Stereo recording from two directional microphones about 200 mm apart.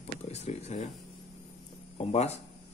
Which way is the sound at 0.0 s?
30° left (ahead or behind).